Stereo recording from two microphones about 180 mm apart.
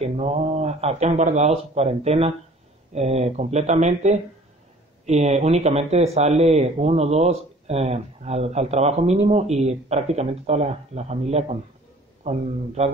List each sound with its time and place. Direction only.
0.0 s speech: 35° right (ahead or behind)